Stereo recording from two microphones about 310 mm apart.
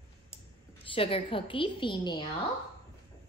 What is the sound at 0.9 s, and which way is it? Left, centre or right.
A woman's voice, centre.